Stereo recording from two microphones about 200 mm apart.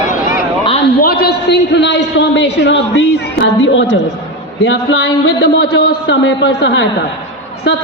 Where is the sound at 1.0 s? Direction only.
50° left (ahead or behind).